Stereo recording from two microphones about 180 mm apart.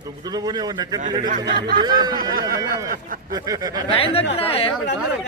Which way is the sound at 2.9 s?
50° right (ahead or behind).